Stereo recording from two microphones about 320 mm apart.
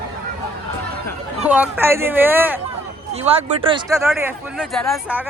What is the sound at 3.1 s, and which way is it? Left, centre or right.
Speech, centre.